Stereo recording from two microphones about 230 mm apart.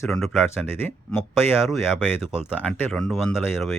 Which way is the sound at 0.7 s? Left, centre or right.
Centre.